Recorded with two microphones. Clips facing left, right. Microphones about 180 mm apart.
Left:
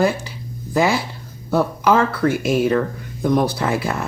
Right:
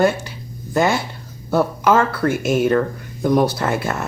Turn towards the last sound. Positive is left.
turn(degrees=0)  # may be behind; listen again after turning